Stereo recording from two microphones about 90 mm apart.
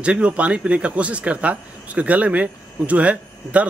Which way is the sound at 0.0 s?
10° right (ahead or behind).